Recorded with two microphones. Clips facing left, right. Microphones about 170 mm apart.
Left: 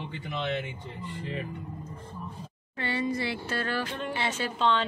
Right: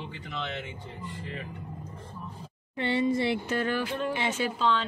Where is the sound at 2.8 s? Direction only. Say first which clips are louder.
Right 4 dB; 25° right (ahead or behind).